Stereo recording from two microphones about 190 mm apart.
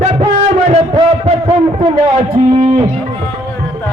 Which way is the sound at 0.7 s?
35° right (ahead or behind).